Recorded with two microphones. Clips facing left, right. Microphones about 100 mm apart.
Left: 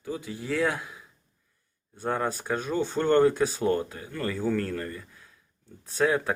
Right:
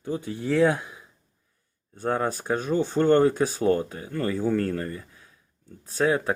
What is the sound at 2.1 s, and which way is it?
Speech, 10° right (ahead or behind).